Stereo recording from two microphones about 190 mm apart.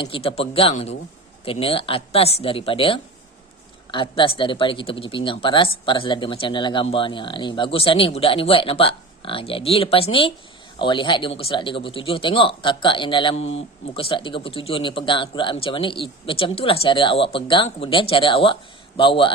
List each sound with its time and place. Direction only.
0.0 s speech: 30° left (ahead or behind)